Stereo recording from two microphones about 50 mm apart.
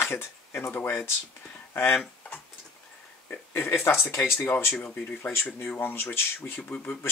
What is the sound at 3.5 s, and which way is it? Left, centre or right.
Speech, left.